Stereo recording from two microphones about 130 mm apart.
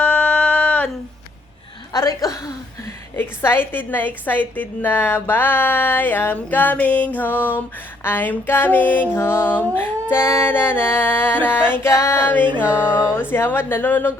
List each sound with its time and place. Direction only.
0.0 s a sound: 10° left (ahead or behind)
1.9 s chuckle: 30° left (ahead or behind)
3.2 s music: 15° left (ahead or behind)
12.6 s music: 10° right (ahead or behind)
12.9 s music: 20° left (ahead or behind)